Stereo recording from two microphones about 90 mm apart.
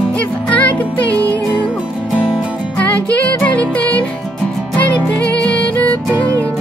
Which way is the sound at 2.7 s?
15° left (ahead or behind).